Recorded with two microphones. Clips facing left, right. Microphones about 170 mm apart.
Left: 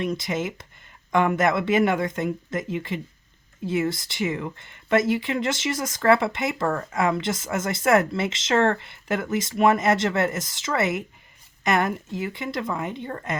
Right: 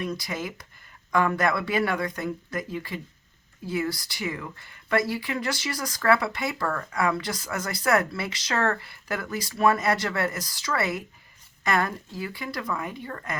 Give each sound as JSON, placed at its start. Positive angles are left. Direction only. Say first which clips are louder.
{"t": 0.0, "sound": "speech", "louder": "left 5 dB", "side_deg": 25}